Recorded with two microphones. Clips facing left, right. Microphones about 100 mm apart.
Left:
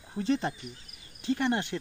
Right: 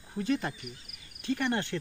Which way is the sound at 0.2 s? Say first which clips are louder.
Left 2 dB; 25° left (ahead or behind).